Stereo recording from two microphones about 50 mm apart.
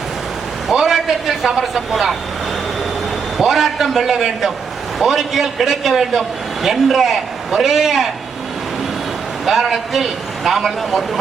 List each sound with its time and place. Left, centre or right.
0.7 s a man's voice: centre
3.3 s a man's voice: centre
9.5 s a man's voice: centre